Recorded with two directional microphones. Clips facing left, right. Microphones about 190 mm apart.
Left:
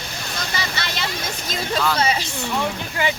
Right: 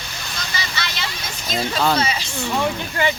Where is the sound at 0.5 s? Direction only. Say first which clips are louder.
Even; 55° left (ahead or behind).